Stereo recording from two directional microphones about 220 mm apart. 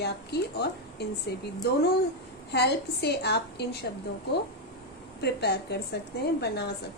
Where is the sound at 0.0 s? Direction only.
50° left (ahead or behind).